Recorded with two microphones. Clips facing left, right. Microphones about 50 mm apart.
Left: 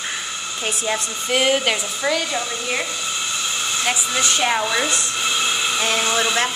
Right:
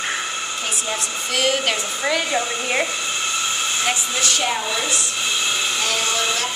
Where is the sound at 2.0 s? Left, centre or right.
Centre.